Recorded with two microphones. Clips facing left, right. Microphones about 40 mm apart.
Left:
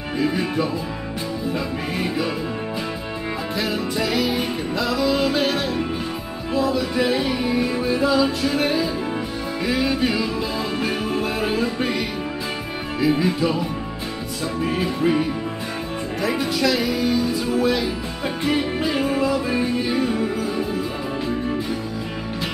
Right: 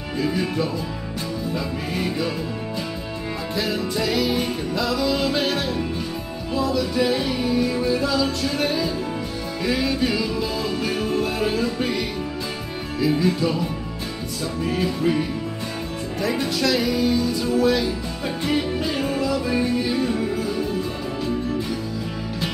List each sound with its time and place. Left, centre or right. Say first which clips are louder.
0.2 s music: left 1 dB; centre
3.5 s music: even; centre
6.7 s music: even; centre
7.4 s music: even; left
13.0 s music: left 1 dB; centre